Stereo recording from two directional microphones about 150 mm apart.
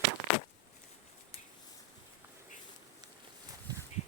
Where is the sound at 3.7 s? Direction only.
25° right (ahead or behind).